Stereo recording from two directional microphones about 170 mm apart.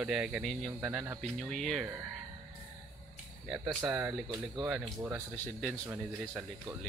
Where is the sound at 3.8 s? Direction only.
15° right (ahead or behind).